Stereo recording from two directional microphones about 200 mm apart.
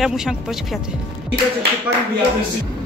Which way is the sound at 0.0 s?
Centre (ahead or behind).